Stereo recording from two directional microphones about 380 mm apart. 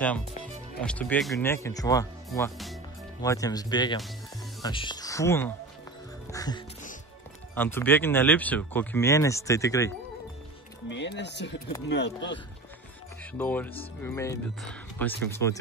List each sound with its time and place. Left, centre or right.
0.7 s speech: centre
6.3 s music: centre
7.5 s speech: centre
10.9 s speech: left
13.2 s speech: centre